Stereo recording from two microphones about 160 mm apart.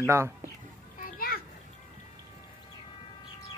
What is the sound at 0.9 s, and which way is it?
Children playing, 60° left (ahead or behind).